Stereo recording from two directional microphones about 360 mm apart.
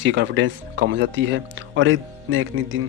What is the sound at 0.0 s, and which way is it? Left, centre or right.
Speech, right.